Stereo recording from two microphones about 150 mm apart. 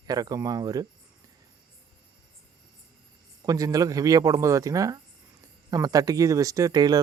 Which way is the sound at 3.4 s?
25° right (ahead or behind).